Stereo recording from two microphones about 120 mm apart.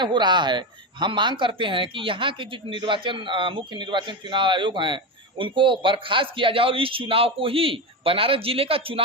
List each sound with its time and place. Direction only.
0.0 s speech: 40° right (ahead or behind)